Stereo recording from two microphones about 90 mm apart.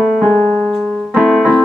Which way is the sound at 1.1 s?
5° right (ahead or behind).